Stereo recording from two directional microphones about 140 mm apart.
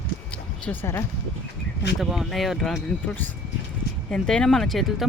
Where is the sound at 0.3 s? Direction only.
10° left (ahead or behind).